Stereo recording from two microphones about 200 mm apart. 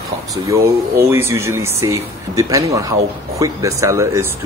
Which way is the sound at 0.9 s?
10° right (ahead or behind).